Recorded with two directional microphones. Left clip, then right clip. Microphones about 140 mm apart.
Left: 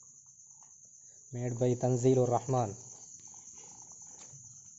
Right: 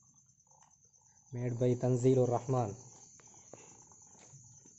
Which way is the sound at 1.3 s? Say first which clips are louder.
Left 1 dB; centre (ahead or behind).